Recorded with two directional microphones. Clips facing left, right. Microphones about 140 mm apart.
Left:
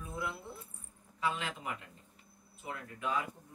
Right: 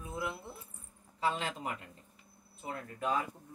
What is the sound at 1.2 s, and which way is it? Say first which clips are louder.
Speech: right 2 dB; 35° right (ahead or behind).